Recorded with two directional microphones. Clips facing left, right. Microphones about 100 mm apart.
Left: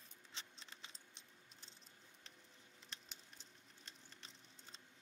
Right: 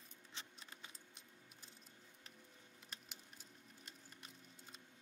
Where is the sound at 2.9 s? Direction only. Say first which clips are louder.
Right 1 dB; 10° right (ahead or behind).